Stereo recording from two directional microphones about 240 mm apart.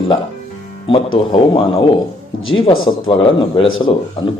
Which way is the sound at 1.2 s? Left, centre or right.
Left.